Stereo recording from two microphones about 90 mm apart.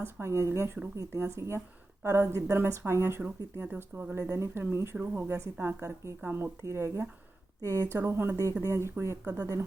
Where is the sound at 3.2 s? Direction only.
15° right (ahead or behind).